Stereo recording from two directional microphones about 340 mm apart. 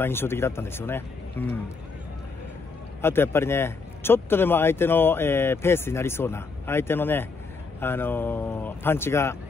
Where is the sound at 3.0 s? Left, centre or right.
Centre.